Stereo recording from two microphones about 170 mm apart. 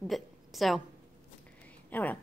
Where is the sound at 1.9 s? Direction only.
10° left (ahead or behind).